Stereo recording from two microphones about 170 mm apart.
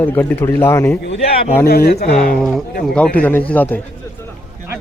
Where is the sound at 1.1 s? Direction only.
35° left (ahead or behind).